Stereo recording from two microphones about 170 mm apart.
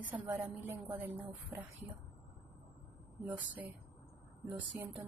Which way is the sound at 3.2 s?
10° right (ahead or behind).